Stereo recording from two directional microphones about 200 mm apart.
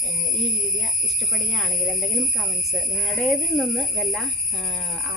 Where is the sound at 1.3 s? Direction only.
Centre (ahead or behind).